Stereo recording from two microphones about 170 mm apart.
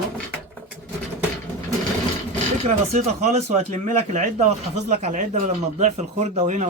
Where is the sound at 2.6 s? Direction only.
40° right (ahead or behind).